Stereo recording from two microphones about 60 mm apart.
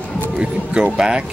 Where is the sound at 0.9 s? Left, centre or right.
Centre.